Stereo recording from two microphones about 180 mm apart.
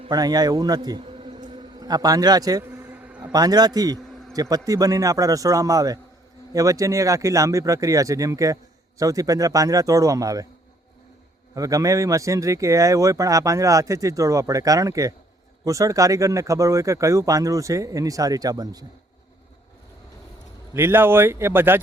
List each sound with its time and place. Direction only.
0.1 s a sound: 20° right (ahead or behind)
3.3 s speech: 20° right (ahead or behind)
11.5 s speech: 20° right (ahead or behind)
20.7 s speech: 10° right (ahead or behind)